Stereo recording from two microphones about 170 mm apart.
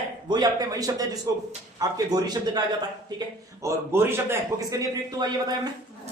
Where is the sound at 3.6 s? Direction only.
15° right (ahead or behind).